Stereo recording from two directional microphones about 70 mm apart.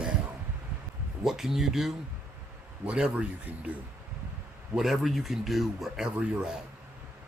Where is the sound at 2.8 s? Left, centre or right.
Centre.